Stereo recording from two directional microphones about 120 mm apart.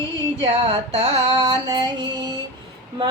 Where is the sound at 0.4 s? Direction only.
60° right (ahead or behind).